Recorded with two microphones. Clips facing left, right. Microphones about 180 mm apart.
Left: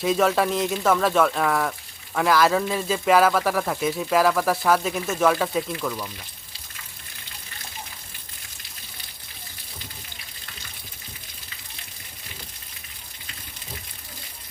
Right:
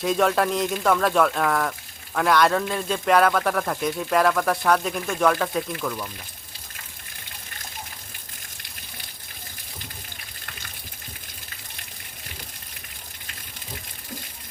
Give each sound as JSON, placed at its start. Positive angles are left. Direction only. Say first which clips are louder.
{"t": 0.0, "sound": "a man's voice", "louder": "even", "side_deg": 0}